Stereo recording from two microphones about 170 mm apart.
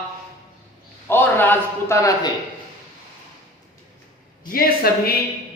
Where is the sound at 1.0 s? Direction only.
10° left (ahead or behind).